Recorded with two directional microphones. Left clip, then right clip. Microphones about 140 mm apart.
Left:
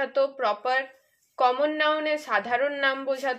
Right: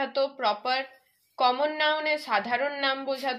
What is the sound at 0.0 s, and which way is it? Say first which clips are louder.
A woman's voice: left 2 dB; 40° left (ahead or behind).